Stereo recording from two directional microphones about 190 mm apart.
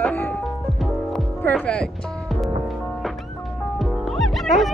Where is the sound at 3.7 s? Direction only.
Centre (ahead or behind).